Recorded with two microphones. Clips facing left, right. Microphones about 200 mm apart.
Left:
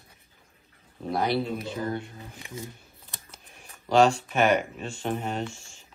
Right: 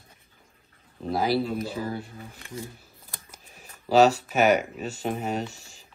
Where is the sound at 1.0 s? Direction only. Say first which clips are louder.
Right 2 dB; centre (ahead or behind).